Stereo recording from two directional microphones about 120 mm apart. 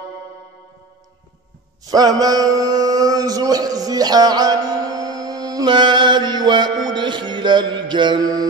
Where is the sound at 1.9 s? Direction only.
30° right (ahead or behind).